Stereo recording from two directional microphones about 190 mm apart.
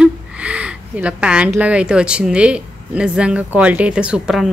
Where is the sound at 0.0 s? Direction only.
5° right (ahead or behind).